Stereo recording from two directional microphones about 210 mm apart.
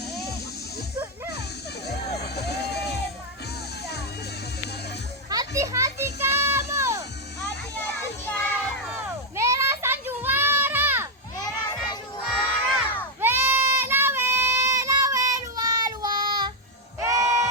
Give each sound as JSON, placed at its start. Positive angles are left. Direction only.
{"t": 2.2, "sound": "music", "side_deg": 50}
{"t": 5.3, "sound": "children playing", "side_deg": -15}
{"t": 8.2, "sound": "child singing", "side_deg": 5}
{"t": 8.9, "sound": "a sound", "side_deg": -10}
{"t": 11.4, "sound": "children playing", "side_deg": 20}
{"t": 12.3, "sound": "crowd", "side_deg": 0}
{"t": 13.1, "sound": "goat", "side_deg": -10}
{"t": 17.0, "sound": "bleat", "side_deg": -15}